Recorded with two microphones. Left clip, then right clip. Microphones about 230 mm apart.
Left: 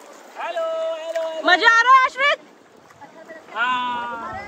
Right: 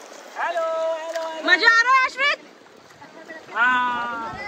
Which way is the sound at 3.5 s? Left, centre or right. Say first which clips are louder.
Right 2 dB; centre.